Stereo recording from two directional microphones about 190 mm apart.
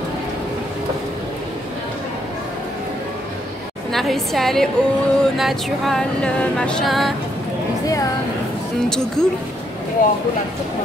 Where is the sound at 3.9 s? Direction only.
Centre (ahead or behind).